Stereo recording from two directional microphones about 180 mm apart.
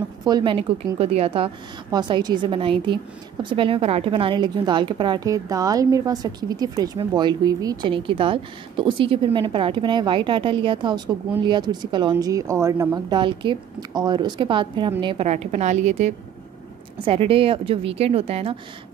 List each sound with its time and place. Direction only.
0.2 s a woman's voice: 25° right (ahead or behind)